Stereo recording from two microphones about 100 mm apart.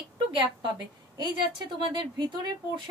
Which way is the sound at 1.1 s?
45° right (ahead or behind).